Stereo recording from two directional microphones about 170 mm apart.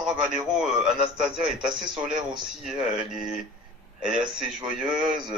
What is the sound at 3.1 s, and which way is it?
Speech, centre (ahead or behind).